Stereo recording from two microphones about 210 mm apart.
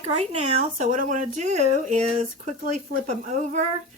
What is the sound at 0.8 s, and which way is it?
Speech, 35° right (ahead or behind).